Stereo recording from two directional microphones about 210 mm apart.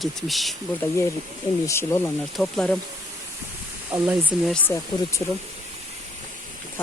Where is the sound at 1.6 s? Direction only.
10° left (ahead or behind).